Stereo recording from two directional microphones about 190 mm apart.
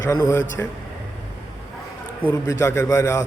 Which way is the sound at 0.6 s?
10° left (ahead or behind).